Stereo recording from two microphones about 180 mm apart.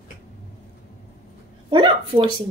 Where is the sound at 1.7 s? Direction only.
30° right (ahead or behind).